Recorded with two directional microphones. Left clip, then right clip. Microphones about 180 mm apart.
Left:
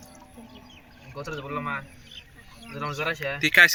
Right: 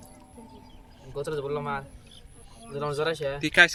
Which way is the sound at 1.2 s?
55° right (ahead or behind).